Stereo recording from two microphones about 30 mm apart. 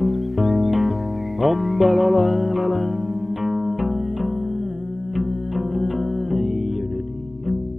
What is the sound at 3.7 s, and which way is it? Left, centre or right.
Music, right.